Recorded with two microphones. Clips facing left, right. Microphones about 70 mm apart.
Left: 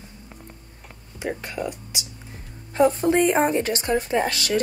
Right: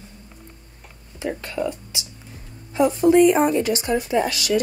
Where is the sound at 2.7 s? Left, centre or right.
Left.